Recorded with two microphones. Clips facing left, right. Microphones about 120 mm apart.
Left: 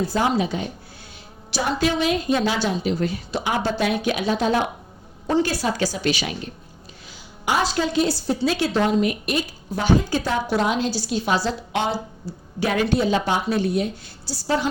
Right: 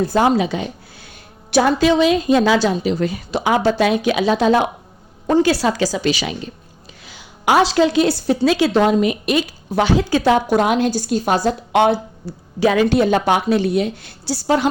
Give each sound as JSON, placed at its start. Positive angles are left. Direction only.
{"t": 0.1, "sound": "a woman's voice", "side_deg": -85}
{"t": 1.5, "sound": "a woman's voice", "side_deg": -75}
{"t": 10.5, "sound": "a woman's voice", "side_deg": -55}